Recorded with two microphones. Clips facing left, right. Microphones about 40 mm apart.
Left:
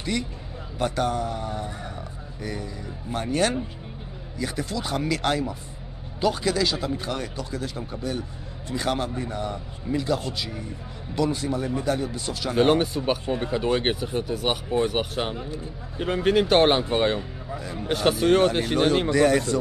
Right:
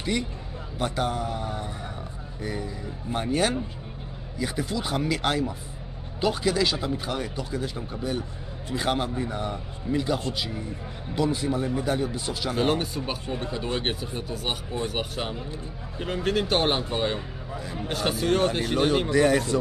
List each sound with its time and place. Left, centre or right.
0.7 s speech: centre
12.5 s speech: centre
12.8 s speech: left
13.1 s speech: centre
14.3 s speech: left
17.1 s speech: centre
17.8 s speech: centre
18.9 s speech: centre